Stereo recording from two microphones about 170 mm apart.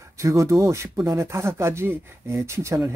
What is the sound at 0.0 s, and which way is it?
Speech, 20° right (ahead or behind).